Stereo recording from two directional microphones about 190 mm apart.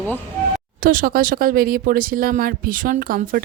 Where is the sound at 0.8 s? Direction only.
45° right (ahead or behind).